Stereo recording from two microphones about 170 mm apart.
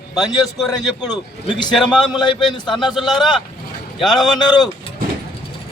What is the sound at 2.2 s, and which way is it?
Speech, 25° left (ahead or behind).